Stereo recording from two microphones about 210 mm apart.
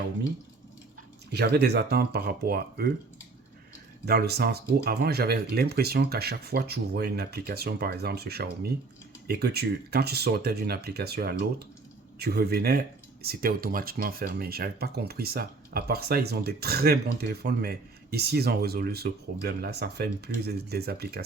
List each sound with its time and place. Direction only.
1.3 s speech: 50° right (ahead or behind)
4.0 s speech: 50° right (ahead or behind)